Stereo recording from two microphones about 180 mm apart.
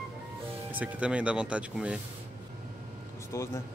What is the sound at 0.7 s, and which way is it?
Speech, 10° right (ahead or behind).